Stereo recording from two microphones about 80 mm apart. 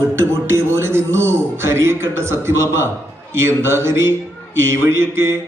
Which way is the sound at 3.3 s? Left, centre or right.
Right.